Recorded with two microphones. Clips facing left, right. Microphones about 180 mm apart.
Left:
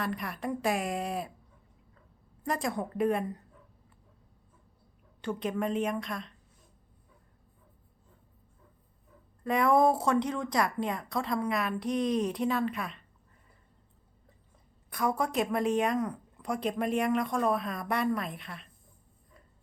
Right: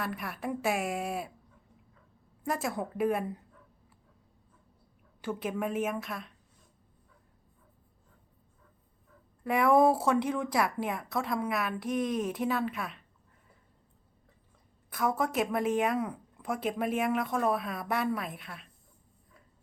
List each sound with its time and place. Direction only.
0.0 s speech: 5° right (ahead or behind)
2.4 s speech: 5° right (ahead or behind)
5.2 s a woman's voice: 5° right (ahead or behind)
9.4 s speech: 10° right (ahead or behind)
14.8 s speech: centre (ahead or behind)